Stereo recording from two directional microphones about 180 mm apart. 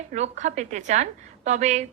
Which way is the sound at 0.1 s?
40° right (ahead or behind).